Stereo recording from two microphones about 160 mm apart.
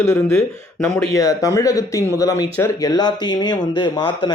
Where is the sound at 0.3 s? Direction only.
5° left (ahead or behind).